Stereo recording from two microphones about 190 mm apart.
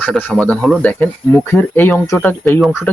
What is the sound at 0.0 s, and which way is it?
Speech, 10° left (ahead or behind).